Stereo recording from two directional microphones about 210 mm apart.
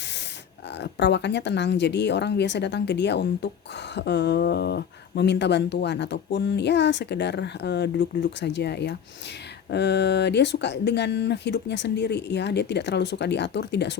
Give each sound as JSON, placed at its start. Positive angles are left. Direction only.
{"t": 0.8, "sound": "speech", "side_deg": 55}